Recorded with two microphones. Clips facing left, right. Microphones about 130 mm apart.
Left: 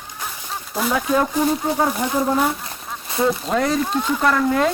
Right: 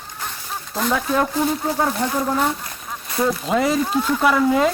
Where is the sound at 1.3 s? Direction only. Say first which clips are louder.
Left 1 dB; 10° left (ahead or behind).